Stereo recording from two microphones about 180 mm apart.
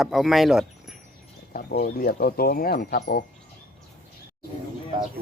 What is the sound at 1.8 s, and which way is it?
Speech, 55° left (ahead or behind).